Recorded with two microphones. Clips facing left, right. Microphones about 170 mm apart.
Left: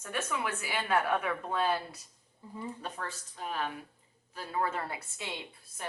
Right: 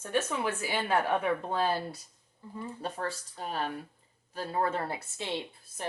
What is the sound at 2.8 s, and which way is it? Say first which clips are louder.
A woman's voice: right 5 dB; 35° right (ahead or behind).